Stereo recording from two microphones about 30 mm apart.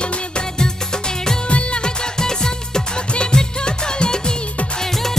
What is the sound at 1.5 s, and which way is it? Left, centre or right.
Music, left.